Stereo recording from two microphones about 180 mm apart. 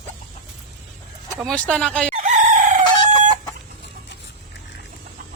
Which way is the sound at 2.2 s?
45° right (ahead or behind).